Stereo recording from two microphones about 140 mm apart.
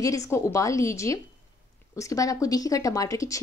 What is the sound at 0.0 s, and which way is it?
Speech, 25° left (ahead or behind).